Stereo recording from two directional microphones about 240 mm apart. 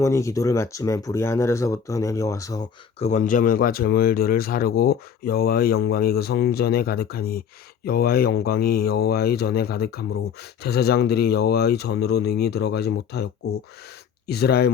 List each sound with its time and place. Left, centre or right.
0.0 s speech: centre
3.0 s speech: left